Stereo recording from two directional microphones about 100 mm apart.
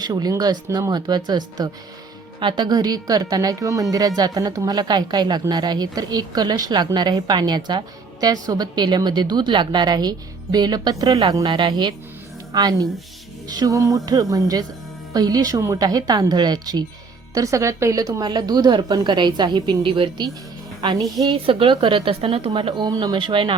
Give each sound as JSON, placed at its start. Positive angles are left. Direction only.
{"t": 0.0, "sound": "a woman's voice", "side_deg": -45}
{"t": 11.4, "sound": "a woman's voice", "side_deg": -50}
{"t": 17.3, "sound": "a woman's voice", "side_deg": -35}
{"t": 18.2, "sound": "speech", "side_deg": -45}
{"t": 20.8, "sound": "a woman's voice", "side_deg": -40}
{"t": 21.2, "sound": "a woman's voice", "side_deg": -60}
{"t": 22.9, "sound": "a woman's voice", "side_deg": -40}
{"t": 23.1, "sound": "a woman's voice", "side_deg": -55}